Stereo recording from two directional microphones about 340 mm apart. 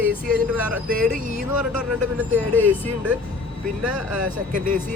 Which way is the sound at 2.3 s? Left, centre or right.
Centre.